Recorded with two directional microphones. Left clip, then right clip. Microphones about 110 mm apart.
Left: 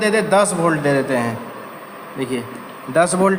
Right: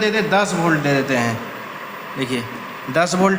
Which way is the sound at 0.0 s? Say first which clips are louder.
Left 2 dB; 60° left (ahead or behind).